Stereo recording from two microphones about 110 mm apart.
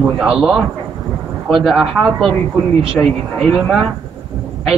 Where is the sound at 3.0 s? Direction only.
10° left (ahead or behind).